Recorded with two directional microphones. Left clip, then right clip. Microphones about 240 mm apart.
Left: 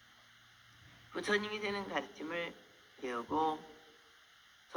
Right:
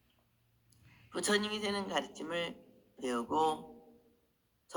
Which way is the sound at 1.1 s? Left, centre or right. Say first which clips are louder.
Right 2 dB; right.